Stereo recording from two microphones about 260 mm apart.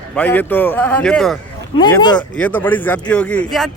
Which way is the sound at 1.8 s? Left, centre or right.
Centre.